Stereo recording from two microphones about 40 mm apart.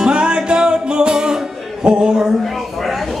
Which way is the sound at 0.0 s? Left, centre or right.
Right.